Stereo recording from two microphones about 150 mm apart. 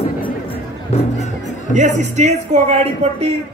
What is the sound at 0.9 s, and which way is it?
Speech, 45° left (ahead or behind).